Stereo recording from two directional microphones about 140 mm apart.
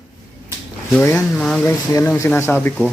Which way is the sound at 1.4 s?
5° left (ahead or behind).